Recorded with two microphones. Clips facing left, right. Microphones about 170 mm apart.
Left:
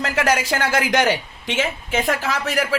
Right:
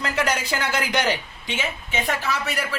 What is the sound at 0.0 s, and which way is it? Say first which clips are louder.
A woman's voice: left 4 dB; 90° left.